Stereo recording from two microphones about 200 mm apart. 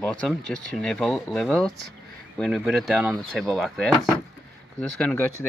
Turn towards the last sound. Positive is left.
turn(degrees=5)  # may be behind; listen again after turning